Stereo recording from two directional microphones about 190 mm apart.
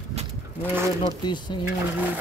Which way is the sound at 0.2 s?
35° right (ahead or behind).